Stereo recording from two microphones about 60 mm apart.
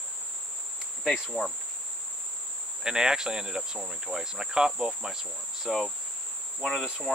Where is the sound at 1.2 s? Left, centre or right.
Centre.